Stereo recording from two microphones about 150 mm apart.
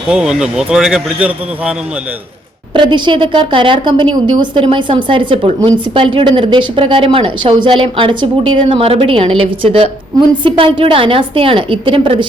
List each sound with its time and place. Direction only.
0.1 s speech: 5° right (ahead or behind)
2.7 s a woman's voice: 35° right (ahead or behind)